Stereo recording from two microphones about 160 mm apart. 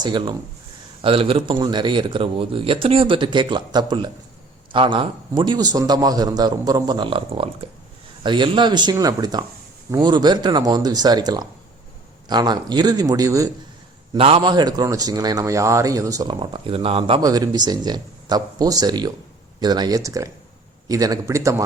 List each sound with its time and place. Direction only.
0.0 s speech: 30° right (ahead or behind)
14.2 s speech: 35° right (ahead or behind)
17.2 s speech: 25° right (ahead or behind)